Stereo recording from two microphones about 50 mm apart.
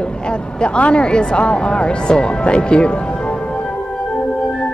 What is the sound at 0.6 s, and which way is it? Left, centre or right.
Speech, left.